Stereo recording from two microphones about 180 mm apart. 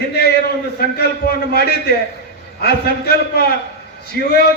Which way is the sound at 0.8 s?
60° left (ahead or behind).